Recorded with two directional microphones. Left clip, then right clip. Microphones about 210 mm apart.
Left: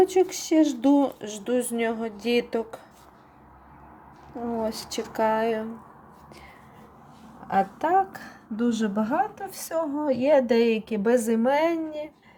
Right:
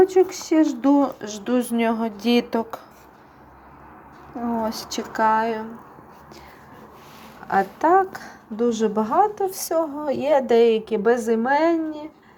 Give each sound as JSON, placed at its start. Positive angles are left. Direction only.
{"t": 0.0, "sound": "speech", "side_deg": 25}
{"t": 4.6, "sound": "speech", "side_deg": 15}
{"t": 7.4, "sound": "speech", "side_deg": 10}